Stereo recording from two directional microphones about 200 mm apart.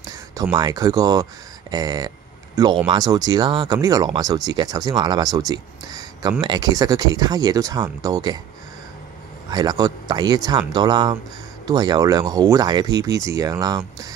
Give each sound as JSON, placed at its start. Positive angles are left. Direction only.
{"t": 0.0, "sound": "speech", "side_deg": -20}
{"t": 9.5, "sound": "speech", "side_deg": -20}